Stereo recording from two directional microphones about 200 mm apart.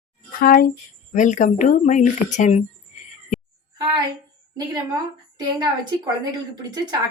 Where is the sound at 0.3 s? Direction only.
45° left (ahead or behind).